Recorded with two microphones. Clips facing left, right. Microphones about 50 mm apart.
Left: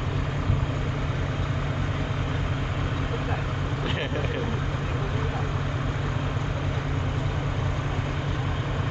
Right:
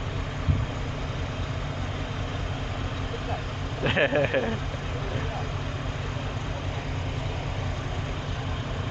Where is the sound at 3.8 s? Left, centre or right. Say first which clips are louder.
Right 9 dB; right.